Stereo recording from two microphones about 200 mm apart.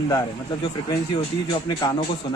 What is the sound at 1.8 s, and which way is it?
Speech, 20° left (ahead or behind).